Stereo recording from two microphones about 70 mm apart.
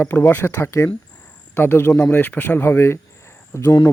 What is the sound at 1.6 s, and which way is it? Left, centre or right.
Speech, left.